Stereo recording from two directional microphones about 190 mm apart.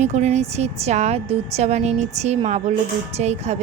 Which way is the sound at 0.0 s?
35° right (ahead or behind).